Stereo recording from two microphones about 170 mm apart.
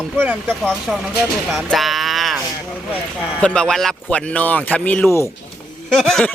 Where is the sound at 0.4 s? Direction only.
5° left (ahead or behind).